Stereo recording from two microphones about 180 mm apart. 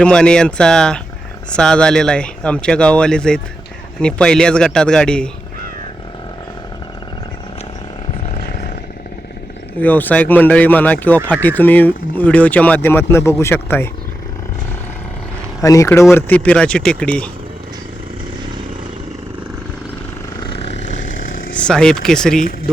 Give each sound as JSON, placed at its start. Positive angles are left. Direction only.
{"t": 0.0, "sound": "speech", "side_deg": 5}
{"t": 9.8, "sound": "speech", "side_deg": 10}
{"t": 15.6, "sound": "speech", "side_deg": 15}
{"t": 21.5, "sound": "speech", "side_deg": 5}